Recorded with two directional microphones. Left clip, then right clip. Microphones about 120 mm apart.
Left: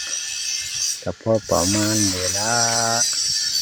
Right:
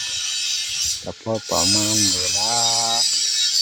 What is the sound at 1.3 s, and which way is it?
Speech, 30° left (ahead or behind).